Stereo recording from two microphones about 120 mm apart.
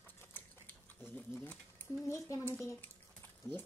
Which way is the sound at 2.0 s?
25° left (ahead or behind).